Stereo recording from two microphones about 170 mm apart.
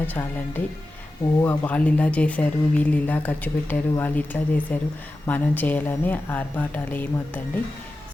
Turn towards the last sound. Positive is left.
turn(degrees=10)  # may be behind; listen again after turning